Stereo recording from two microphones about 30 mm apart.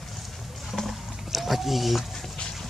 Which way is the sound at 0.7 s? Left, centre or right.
Centre.